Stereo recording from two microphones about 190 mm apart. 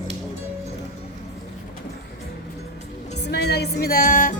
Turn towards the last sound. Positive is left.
turn(degrees=45)  # may be behind; listen again after turning